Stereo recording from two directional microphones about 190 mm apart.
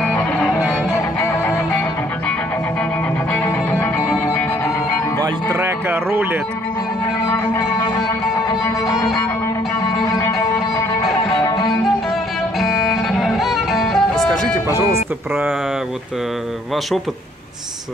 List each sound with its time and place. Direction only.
0.9 s music: 15° left (ahead or behind)
3.8 s music: 15° left (ahead or behind)
5.2 s music: 15° right (ahead or behind)
7.2 s music: 10° left (ahead or behind)
12.5 s music: centre (ahead or behind)